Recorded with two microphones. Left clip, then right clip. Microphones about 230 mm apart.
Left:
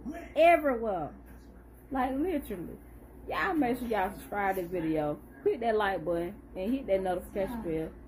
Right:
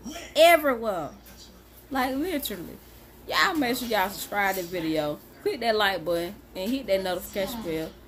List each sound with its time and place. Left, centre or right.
0.3 s a woman's voice: centre